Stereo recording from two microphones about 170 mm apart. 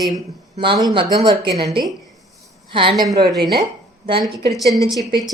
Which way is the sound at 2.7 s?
30° right (ahead or behind).